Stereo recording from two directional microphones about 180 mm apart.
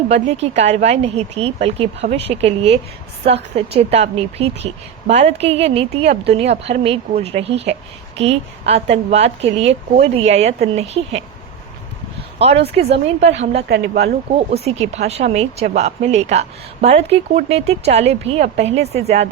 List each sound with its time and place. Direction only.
0.1 s speech: 35° right (ahead or behind)
12.4 s speech: 35° right (ahead or behind)
13.7 s speech: 65° right (ahead or behind)
14.3 s speech: 35° right (ahead or behind)